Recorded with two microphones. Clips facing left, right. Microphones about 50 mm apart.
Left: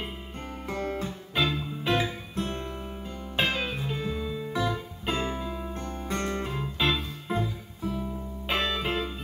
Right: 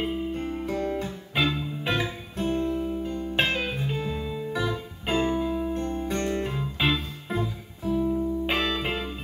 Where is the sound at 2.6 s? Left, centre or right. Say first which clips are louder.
Right 9 dB; centre.